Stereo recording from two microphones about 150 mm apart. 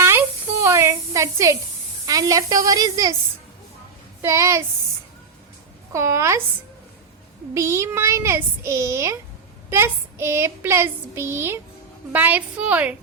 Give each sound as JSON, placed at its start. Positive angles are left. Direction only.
{"t": 0.0, "sound": "a sound", "side_deg": -15}
{"t": 2.0, "sound": "a child's voice", "side_deg": -25}
{"t": 4.2, "sound": "a child's voice", "side_deg": -20}
{"t": 5.9, "sound": "a child's voice", "side_deg": -20}
{"t": 7.5, "sound": "a child's voice", "side_deg": -20}
{"t": 9.6, "sound": "child singing", "side_deg": -15}